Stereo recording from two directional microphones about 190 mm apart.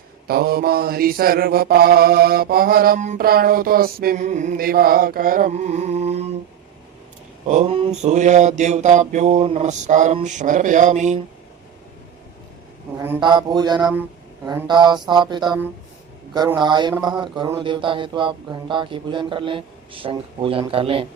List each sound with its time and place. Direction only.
0.3 s mantra: 55° right (ahead or behind); by 6.3 s 35° right (ahead or behind)
7.4 s mantra: 35° right (ahead or behind)
13.1 s speech: 25° right (ahead or behind)